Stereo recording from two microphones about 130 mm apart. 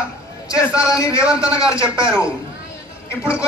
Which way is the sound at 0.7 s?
25° left (ahead or behind).